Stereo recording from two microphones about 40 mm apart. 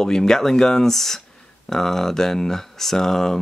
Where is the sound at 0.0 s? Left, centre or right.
Centre.